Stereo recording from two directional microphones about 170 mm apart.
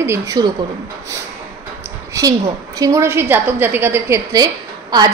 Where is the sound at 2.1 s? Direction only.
20° right (ahead or behind).